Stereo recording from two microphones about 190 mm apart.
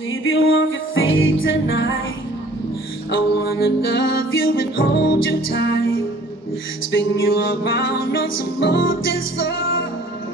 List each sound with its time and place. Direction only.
0.1 s music: 90° left
3.6 s music: 80° left
4.7 s music: 60° left (ahead or behind); by 6.0 s 85° left
6.9 s music: 60° left (ahead or behind)
9.4 s music: 80° left